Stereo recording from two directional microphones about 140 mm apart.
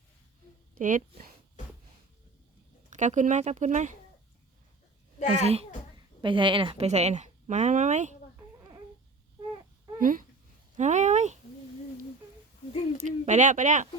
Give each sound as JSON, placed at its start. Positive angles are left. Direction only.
{"t": 0.8, "sound": "speech", "side_deg": -70}
{"t": 2.9, "sound": "speech", "side_deg": -60}
{"t": 5.4, "sound": "a woman's voice", "side_deg": -50}
{"t": 6.2, "sound": "a woman's voice", "side_deg": -35}
{"t": 10.0, "sound": "speech", "side_deg": -75}
{"t": 10.8, "sound": "speech", "side_deg": -60}
{"t": 13.0, "sound": "speech", "side_deg": -55}